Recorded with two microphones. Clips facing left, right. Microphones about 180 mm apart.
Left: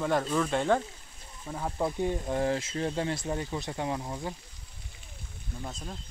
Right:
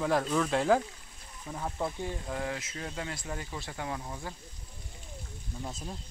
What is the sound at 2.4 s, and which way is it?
Speech, 30° left (ahead or behind).